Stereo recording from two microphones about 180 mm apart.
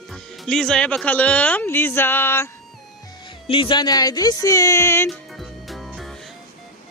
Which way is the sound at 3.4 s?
30° left (ahead or behind).